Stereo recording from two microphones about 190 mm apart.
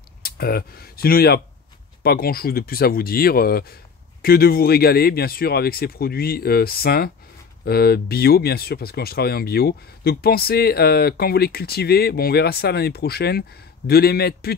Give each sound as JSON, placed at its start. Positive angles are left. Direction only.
{"t": 0.2, "sound": "speech", "side_deg": 55}